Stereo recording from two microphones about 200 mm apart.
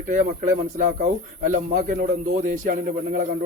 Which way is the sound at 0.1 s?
40° right (ahead or behind).